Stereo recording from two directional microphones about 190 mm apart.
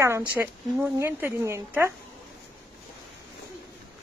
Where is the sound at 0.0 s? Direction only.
15° right (ahead or behind).